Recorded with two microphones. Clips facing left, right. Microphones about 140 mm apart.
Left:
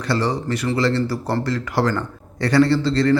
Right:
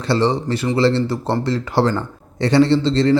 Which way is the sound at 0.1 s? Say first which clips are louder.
Right 4 dB; 25° right (ahead or behind).